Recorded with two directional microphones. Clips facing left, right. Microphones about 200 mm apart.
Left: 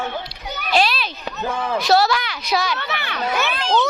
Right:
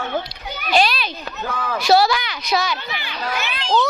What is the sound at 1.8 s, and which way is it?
Speech, centre (ahead or behind).